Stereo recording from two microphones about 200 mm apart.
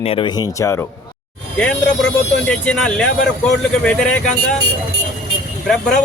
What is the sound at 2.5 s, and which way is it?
Speech, 5° left (ahead or behind).